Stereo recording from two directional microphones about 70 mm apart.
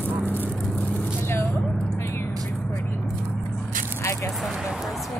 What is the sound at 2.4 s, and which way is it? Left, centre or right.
Vehicle, centre.